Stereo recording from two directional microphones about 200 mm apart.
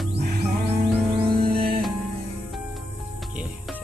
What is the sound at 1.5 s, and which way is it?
Music, 50° right (ahead or behind).